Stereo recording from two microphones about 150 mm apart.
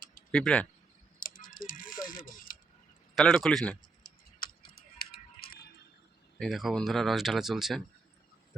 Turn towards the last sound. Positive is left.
turn(degrees=0)  # may be behind; listen again after turning